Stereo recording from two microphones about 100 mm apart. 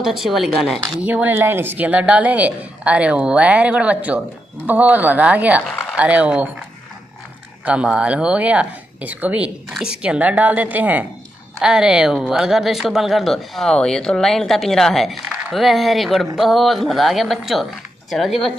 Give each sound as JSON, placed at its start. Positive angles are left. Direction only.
{"t": 0.0, "sound": "speech", "side_deg": -5}
{"t": 1.0, "sound": "a woman's voice", "side_deg": -15}
{"t": 7.6, "sound": "a woman's voice", "side_deg": -10}
{"t": 11.6, "sound": "speech", "side_deg": -5}